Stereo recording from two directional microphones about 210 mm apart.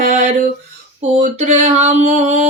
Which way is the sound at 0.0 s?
35° right (ahead or behind).